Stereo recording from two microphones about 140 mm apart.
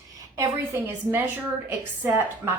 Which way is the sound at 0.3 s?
20° right (ahead or behind).